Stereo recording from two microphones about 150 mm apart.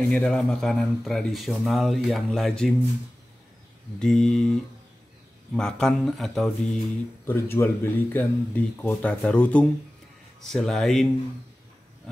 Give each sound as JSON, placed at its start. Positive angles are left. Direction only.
{"t": 0.1, "sound": "speech", "side_deg": 5}
{"t": 4.0, "sound": "speech", "side_deg": 5}
{"t": 7.2, "sound": "speech", "side_deg": 15}